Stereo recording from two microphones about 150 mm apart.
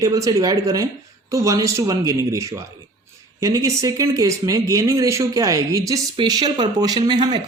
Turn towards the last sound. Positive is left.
turn(degrees=-30)  # may be behind; listen again after turning